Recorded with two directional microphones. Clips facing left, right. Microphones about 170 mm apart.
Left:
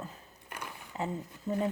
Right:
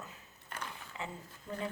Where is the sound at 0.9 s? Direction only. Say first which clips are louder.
Left 8 dB; 40° left (ahead or behind).